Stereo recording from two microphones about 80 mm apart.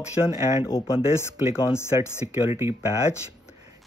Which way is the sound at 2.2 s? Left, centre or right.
Right.